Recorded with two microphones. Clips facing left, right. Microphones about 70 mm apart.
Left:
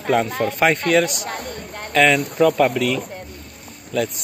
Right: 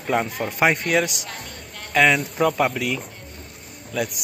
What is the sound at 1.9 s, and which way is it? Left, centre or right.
Speech, centre.